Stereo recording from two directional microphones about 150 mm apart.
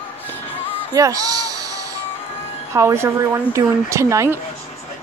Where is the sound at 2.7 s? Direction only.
20° right (ahead or behind).